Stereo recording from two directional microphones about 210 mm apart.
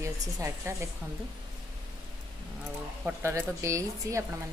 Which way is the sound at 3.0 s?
15° right (ahead or behind).